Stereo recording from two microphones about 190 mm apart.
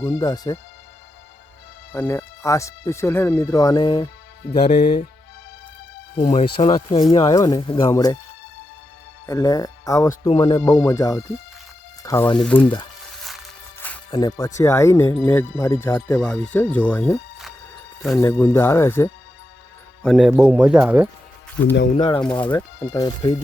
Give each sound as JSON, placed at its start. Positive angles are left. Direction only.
{"t": 0.0, "sound": "speech", "side_deg": 20}
{"t": 2.0, "sound": "speech", "side_deg": 10}
{"t": 6.1, "sound": "speech", "side_deg": 30}
{"t": 9.2, "sound": "speech", "side_deg": 20}
{"t": 13.7, "sound": "music", "side_deg": 10}
{"t": 14.1, "sound": "speech", "side_deg": 20}
{"t": 18.2, "sound": "speech", "side_deg": 15}
{"t": 20.0, "sound": "a man's voice", "side_deg": 0}
{"t": 21.6, "sound": "speech", "side_deg": 65}
{"t": 21.9, "sound": "speech", "side_deg": 25}
{"t": 22.2, "sound": "speech", "side_deg": 5}
{"t": 22.5, "sound": "speech", "side_deg": 20}